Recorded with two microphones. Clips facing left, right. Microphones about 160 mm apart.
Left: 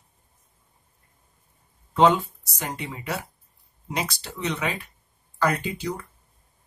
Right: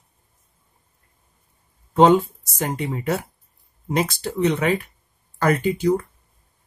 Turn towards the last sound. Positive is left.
turn(degrees=-50)  # may be behind; listen again after turning